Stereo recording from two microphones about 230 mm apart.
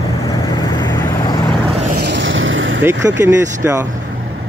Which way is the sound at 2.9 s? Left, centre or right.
Centre.